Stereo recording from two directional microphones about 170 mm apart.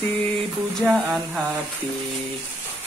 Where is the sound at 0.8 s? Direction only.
Centre (ahead or behind).